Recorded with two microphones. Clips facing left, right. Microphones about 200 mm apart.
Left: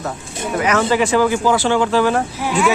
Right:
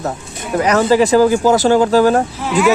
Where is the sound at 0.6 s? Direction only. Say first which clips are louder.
Right 5 dB; 35° right (ahead or behind).